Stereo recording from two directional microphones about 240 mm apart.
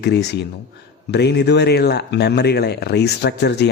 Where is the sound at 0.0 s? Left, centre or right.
Left.